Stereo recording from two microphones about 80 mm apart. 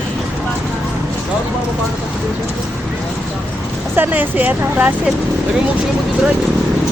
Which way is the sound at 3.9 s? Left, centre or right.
Right.